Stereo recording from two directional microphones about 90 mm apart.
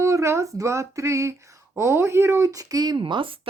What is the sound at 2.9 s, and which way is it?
Speech, 65° right (ahead or behind).